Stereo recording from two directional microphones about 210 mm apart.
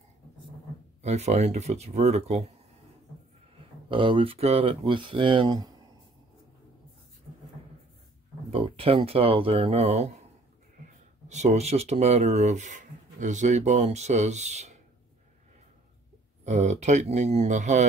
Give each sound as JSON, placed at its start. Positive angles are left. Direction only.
{"t": 1.0, "sound": "speech", "side_deg": -30}
{"t": 3.9, "sound": "speech", "side_deg": -25}
{"t": 8.5, "sound": "speech", "side_deg": -25}
{"t": 11.2, "sound": "speech", "side_deg": -35}
{"t": 16.4, "sound": "speech", "side_deg": -35}